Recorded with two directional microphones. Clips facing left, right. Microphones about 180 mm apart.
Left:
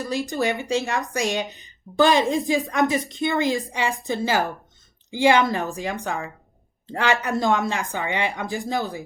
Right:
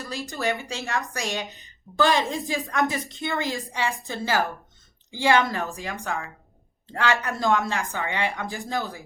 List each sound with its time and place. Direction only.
0.0 s speech: 20° left (ahead or behind)